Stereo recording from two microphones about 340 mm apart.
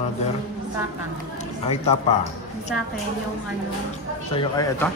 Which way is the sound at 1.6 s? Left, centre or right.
Centre.